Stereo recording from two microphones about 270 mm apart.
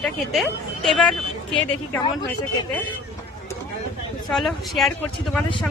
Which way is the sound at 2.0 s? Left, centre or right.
Centre.